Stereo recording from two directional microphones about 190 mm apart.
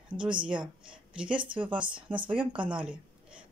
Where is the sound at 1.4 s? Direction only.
25° right (ahead or behind).